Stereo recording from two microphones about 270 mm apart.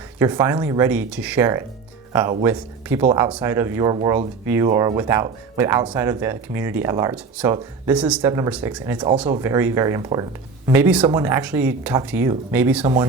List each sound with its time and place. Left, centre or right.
0.2 s speech: centre
12.8 s speech: centre